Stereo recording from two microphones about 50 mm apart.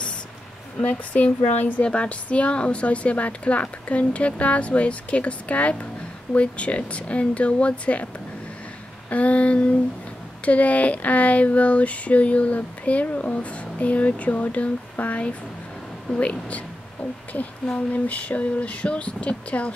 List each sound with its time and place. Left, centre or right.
0.7 s speech: left
9.1 s speech: left
17.9 s speech: left